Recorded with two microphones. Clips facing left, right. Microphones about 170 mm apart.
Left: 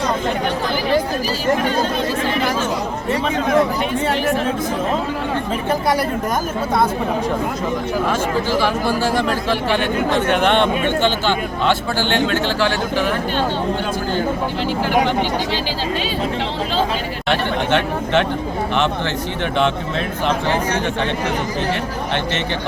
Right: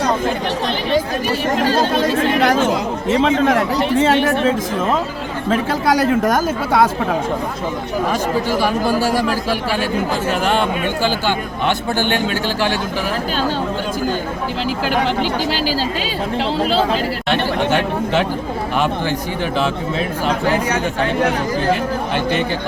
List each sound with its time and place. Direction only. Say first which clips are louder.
1.7 s speech: right 4 dB; 85° right
8.6 s speech: right 2 dB; 10° right (ahead or behind)
17.2 s speech: even; 5° right (ahead or behind)